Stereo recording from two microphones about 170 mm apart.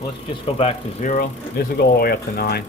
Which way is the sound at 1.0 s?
50° left (ahead or behind).